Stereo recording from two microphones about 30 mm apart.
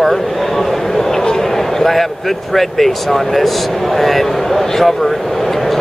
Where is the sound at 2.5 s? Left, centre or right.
Centre.